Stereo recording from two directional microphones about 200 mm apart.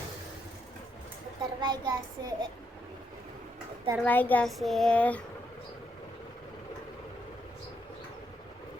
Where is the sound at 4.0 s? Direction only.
10° left (ahead or behind).